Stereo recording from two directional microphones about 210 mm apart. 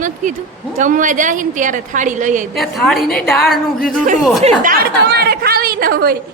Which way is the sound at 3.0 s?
45° left (ahead or behind).